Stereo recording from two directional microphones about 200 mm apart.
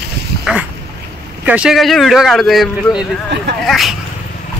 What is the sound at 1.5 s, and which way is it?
Speech, 5° right (ahead or behind).